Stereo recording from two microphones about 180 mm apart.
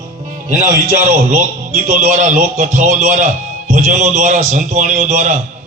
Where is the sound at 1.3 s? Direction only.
45° right (ahead or behind).